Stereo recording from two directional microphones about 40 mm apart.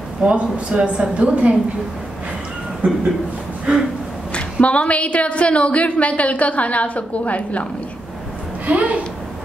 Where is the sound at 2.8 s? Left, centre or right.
Right.